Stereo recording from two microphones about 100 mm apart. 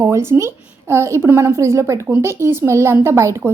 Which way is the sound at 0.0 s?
25° right (ahead or behind).